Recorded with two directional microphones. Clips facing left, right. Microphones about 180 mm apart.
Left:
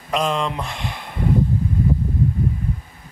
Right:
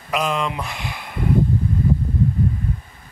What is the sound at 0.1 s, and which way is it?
Speech, 5° right (ahead or behind).